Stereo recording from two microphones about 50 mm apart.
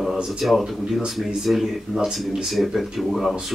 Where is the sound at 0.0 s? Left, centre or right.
Centre.